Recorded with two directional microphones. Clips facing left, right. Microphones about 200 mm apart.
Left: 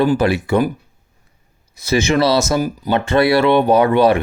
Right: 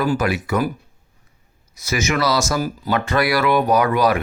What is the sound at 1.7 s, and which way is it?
Speech, 30° left (ahead or behind).